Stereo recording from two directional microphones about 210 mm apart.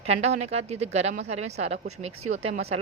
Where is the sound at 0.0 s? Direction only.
30° right (ahead or behind).